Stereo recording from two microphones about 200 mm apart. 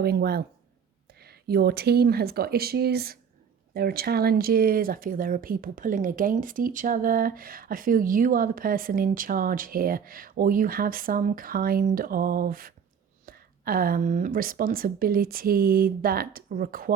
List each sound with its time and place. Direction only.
0.0 s speech: 50° right (ahead or behind)